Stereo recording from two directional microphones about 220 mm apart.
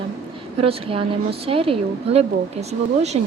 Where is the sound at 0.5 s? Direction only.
25° right (ahead or behind).